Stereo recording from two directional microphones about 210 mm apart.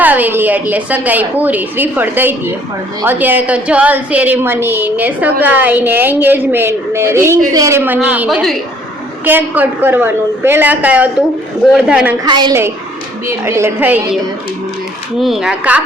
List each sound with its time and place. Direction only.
0.0 s a woman's voice: 10° right (ahead or behind)
12.2 s a woman's voice: 20° right (ahead or behind)
15.2 s speech: centre (ahead or behind)